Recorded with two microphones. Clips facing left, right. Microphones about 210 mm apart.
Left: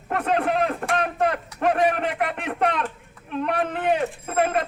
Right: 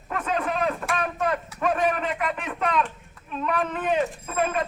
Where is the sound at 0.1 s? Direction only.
65° left (ahead or behind).